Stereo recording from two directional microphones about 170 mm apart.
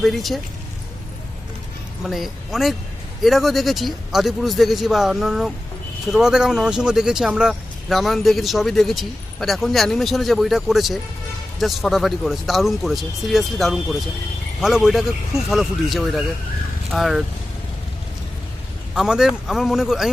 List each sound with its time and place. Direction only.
0.0 s speech: centre (ahead or behind)
2.0 s speech: centre (ahead or behind)
18.9 s speech: 5° right (ahead or behind)